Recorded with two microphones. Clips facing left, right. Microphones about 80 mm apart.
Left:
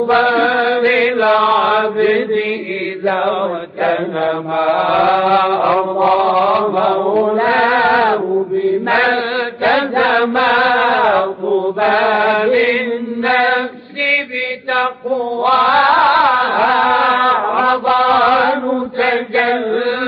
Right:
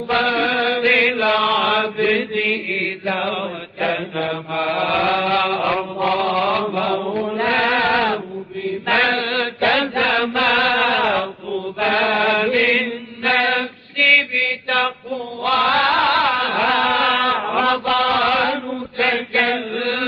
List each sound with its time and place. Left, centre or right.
0.1 s mantra: left
6.9 s mantra: left
7.3 s mantra: left
8.0 s mantra: left
8.6 s chant: left
10.2 s mantra: left
10.7 s music: left
11.1 s mantra: left
11.8 s mantra: left
12.5 s chant: left
15.0 s mantra: left
16.1 s music: left
16.8 s mantra: left
17.6 s mantra: left